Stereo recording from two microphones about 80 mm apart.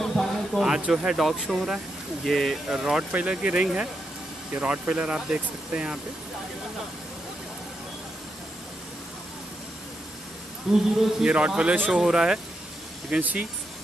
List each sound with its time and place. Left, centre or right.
0.0 s a sound: centre
0.7 s a man's voice: centre
2.7 s speech: centre
10.7 s a man's voice: centre
13.2 s speech: centre